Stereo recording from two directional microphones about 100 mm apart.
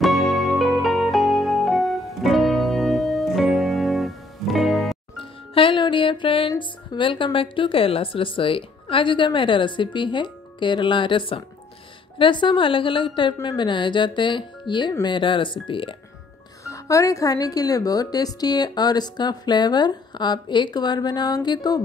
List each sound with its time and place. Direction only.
0.0 s music: centre (ahead or behind)
5.5 s a woman's voice: 60° left (ahead or behind)
16.6 s speech: 30° left (ahead or behind)